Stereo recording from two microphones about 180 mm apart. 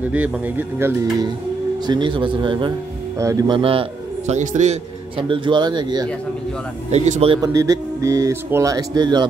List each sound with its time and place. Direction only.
0.1 s speech: 10° right (ahead or behind)
1.9 s speech: 25° right (ahead or behind)
4.3 s a man's voice: 40° right (ahead or behind)
5.1 s speech: 30° right (ahead or behind)
6.9 s a man's voice: 35° right (ahead or behind)
7.4 s speech: 20° right (ahead or behind)